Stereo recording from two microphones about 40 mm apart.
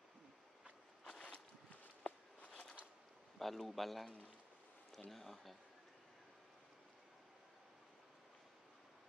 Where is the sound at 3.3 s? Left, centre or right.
Centre.